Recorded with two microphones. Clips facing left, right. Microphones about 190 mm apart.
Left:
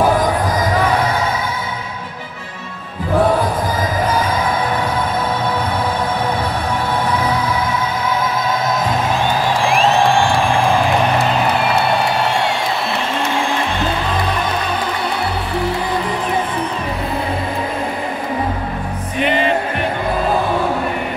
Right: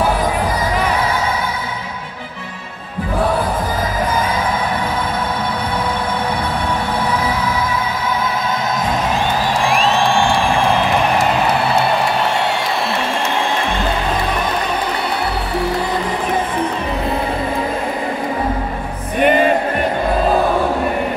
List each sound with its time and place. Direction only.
19.1 s music: 50° right (ahead or behind)